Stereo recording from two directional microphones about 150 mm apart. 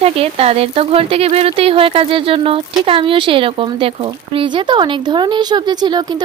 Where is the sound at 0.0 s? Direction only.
40° right (ahead or behind).